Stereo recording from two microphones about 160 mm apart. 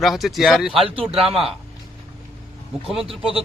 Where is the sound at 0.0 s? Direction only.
Centre (ahead or behind).